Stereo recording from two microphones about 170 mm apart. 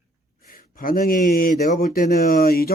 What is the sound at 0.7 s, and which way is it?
Speech, 55° left (ahead or behind).